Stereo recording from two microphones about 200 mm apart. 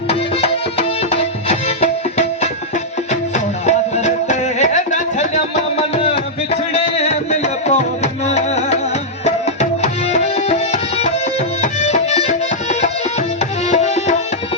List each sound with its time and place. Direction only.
0.1 s music: 30° left (ahead or behind)
9.2 s tabla: 35° left (ahead or behind)